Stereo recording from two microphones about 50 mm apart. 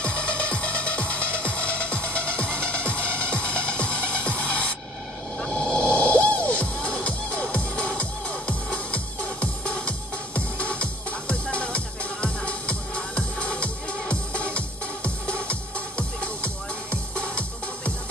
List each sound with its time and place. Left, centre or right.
0.0 s music: left
16.0 s music: left